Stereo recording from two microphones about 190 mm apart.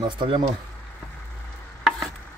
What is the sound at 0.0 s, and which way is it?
Speech, 25° right (ahead or behind).